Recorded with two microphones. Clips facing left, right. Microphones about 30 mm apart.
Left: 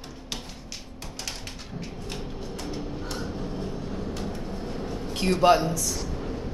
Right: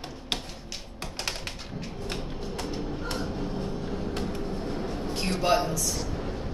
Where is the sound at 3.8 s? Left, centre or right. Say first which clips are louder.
Right 1 dB; right.